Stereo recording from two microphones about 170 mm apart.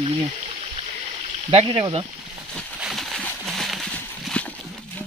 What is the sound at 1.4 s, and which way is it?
Speech, 35° right (ahead or behind).